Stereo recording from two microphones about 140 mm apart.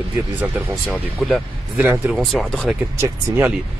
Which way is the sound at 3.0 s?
15° right (ahead or behind).